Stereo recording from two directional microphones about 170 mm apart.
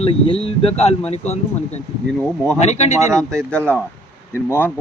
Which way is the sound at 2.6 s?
40° left (ahead or behind).